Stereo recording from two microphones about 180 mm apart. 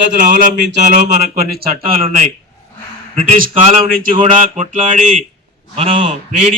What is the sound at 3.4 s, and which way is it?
A man's voice, 50° right (ahead or behind).